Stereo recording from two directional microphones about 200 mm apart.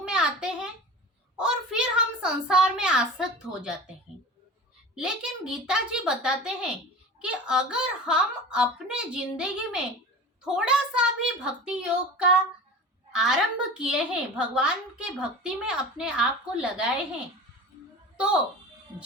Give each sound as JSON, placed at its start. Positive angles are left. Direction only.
{"t": 0.0, "sound": "a sound", "side_deg": -5}
{"t": 1.4, "sound": "a woman's voice", "side_deg": -5}
{"t": 4.9, "sound": "a woman's voice", "side_deg": -5}